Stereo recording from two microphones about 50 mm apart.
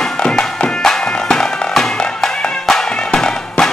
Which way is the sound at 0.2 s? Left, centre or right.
Centre.